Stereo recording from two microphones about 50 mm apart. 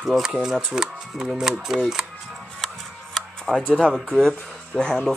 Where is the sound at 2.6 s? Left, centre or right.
Centre.